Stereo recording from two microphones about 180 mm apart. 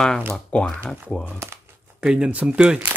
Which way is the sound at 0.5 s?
5° left (ahead or behind).